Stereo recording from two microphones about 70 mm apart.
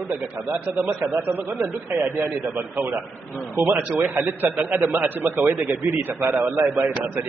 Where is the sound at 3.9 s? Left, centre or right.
Right.